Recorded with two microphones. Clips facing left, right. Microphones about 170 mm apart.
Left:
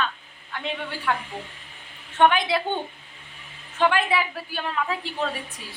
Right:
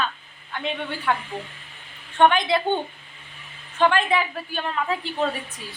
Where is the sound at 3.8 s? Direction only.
10° left (ahead or behind).